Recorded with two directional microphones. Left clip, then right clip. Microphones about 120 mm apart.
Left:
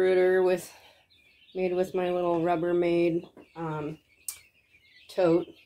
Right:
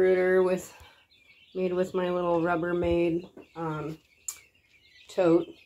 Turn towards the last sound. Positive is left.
turn(degrees=-5)  # may be behind; listen again after turning